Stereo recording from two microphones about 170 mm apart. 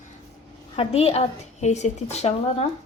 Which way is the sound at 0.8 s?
35° left (ahead or behind).